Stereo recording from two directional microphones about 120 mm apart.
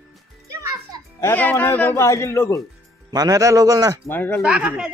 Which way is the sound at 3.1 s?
30° right (ahead or behind).